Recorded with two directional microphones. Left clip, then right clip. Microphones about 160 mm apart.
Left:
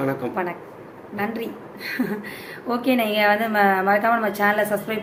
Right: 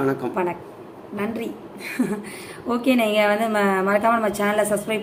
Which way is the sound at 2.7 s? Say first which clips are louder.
Right 1 dB; 15° right (ahead or behind).